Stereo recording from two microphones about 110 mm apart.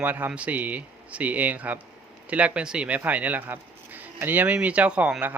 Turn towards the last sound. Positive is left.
turn(degrees=-15)  # may be behind; listen again after turning